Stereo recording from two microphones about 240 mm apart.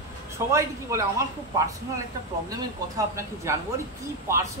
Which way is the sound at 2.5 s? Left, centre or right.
Centre.